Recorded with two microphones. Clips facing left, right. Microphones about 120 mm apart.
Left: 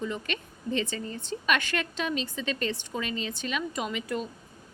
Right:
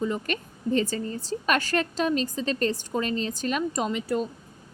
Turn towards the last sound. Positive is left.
turn(degrees=-35)  # may be behind; listen again after turning